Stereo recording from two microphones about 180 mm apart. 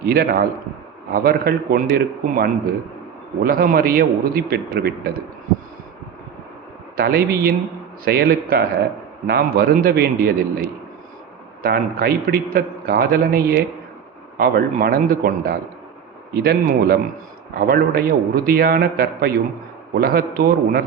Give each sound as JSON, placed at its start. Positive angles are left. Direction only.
{"t": 0.0, "sound": "a man's voice", "side_deg": -60}
{"t": 6.9, "sound": "a man's voice", "side_deg": -60}
{"t": 11.6, "sound": "a man's voice", "side_deg": -55}